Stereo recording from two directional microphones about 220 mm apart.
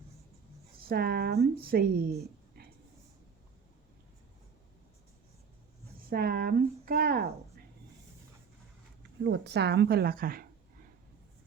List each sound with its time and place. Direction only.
0.8 s speech: 45° right (ahead or behind)
6.0 s speech: 40° right (ahead or behind)
9.2 s speech: 50° right (ahead or behind)